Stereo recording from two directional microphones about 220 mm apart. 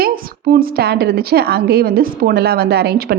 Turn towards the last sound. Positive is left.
turn(degrees=-45)  # may be behind; listen again after turning